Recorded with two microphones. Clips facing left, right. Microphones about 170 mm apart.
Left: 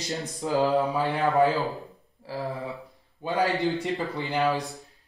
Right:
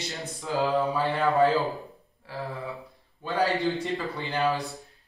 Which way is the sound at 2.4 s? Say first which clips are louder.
Left 2 dB; 20° left (ahead or behind).